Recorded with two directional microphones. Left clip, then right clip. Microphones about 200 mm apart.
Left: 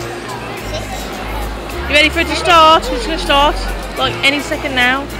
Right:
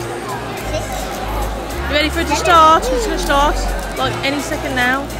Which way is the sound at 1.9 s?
5° left (ahead or behind).